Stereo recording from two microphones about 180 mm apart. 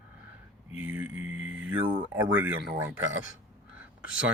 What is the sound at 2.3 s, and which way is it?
Speech, 10° right (ahead or behind).